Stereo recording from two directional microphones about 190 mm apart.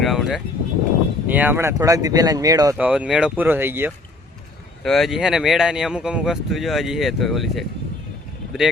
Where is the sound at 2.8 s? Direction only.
5° right (ahead or behind).